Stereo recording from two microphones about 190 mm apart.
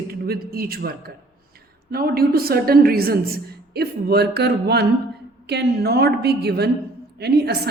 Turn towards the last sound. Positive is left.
turn(degrees=-60)  # may be behind; listen again after turning